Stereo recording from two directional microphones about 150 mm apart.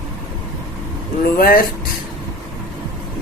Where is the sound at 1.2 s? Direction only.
80° left.